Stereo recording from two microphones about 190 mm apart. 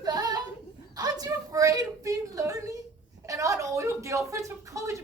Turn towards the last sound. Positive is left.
turn(degrees=-15)  # may be behind; listen again after turning